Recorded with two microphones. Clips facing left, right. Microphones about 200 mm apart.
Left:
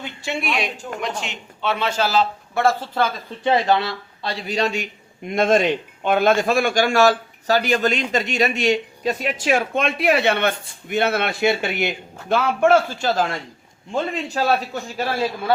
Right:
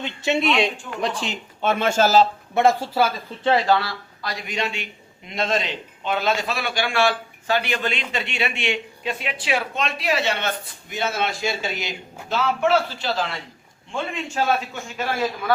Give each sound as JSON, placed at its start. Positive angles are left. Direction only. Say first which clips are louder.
{"t": 0.0, "sound": "speech", "louder": "right 5 dB", "side_deg": -20}
{"t": 1.0, "sound": "speech", "louder": "right 4 dB", "side_deg": -35}
{"t": 1.7, "sound": "speech", "louder": "right 3 dB", "side_deg": -45}
{"t": 2.6, "sound": "speech", "louder": "right 1 dB", "side_deg": -20}
{"t": 3.4, "sound": "a man's voice", "louder": "left 1 dB", "side_deg": 20}